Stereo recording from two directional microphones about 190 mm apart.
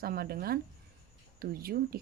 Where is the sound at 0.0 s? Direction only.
50° right (ahead or behind).